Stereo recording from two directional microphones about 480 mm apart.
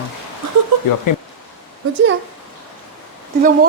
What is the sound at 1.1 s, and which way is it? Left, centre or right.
Speech, left.